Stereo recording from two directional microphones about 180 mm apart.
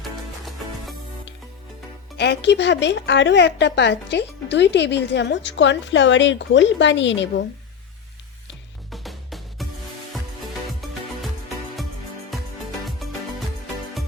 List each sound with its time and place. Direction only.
2.1 s speech: 70° left (ahead or behind)
8.9 s music: centre (ahead or behind)